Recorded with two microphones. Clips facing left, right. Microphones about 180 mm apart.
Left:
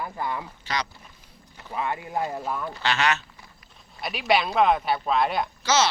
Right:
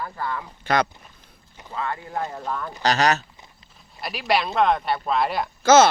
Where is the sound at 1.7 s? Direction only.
15° left (ahead or behind).